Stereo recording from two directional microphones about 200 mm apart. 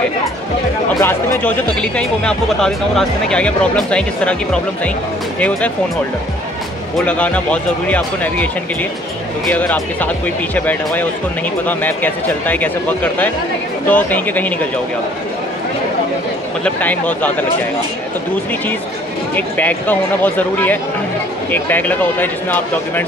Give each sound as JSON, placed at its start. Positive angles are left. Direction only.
{"t": 0.9, "sound": "speech", "side_deg": 10}
{"t": 7.0, "sound": "speech", "side_deg": 5}
{"t": 9.5, "sound": "speech", "side_deg": 10}
{"t": 16.6, "sound": "speech", "side_deg": 10}
{"t": 19.3, "sound": "speech", "side_deg": 10}